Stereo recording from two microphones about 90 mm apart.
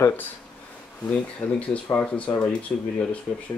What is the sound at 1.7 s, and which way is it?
Speech, 15° left (ahead or behind).